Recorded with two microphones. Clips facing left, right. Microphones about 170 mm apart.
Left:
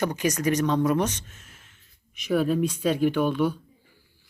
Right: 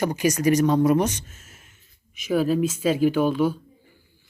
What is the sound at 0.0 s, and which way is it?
Speech, 10° right (ahead or behind).